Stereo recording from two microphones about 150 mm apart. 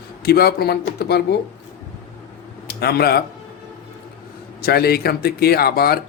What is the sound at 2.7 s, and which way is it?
Speech, 90° left.